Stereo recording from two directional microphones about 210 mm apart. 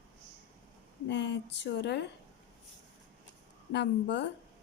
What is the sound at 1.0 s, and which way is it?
A woman's voice, 55° left (ahead or behind).